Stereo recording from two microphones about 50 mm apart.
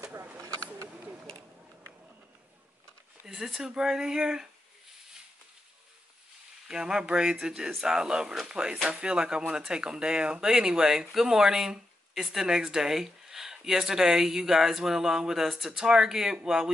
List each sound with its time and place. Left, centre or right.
3.3 s speech: centre
6.7 s speech: centre